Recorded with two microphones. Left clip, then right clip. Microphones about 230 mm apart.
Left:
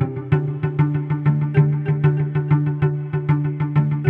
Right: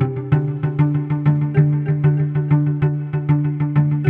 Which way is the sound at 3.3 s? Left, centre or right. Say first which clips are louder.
Right 3 dB; left.